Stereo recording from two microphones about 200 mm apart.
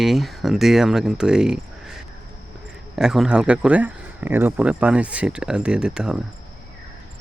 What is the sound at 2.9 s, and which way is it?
Speech, 5° right (ahead or behind).